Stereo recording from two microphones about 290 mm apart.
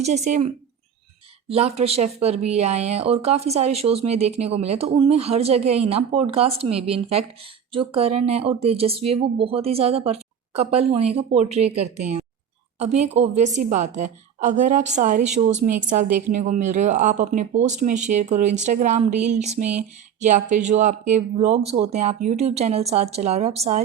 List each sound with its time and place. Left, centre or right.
0.0 s speech: right
1.5 s speech: right